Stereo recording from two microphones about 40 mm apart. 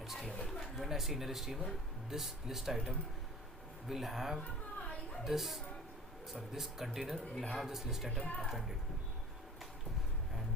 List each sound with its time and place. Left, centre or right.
0.0 s a sound: centre
0.8 s speech: centre
7.7 s speech: centre
8.2 s speech: left
8.4 s speech: centre